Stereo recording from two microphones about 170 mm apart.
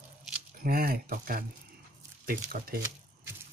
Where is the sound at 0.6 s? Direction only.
60° right (ahead or behind).